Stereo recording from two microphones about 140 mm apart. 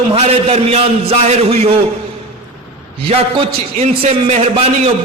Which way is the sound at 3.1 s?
45° right (ahead or behind).